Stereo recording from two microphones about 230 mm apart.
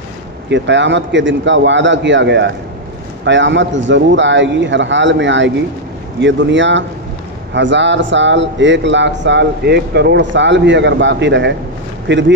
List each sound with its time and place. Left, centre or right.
0.5 s a man's voice: right